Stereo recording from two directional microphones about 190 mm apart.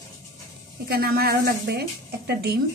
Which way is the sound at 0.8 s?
55° right (ahead or behind).